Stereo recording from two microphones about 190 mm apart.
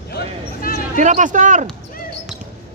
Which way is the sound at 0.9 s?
40° right (ahead or behind).